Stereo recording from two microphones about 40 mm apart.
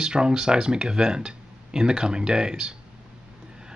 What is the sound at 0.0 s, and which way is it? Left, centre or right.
Speech, right.